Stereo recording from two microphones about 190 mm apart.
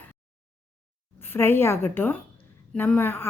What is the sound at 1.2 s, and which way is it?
A woman's voice, 10° left (ahead or behind).